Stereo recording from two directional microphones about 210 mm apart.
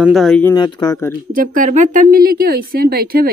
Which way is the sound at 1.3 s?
40° right (ahead or behind).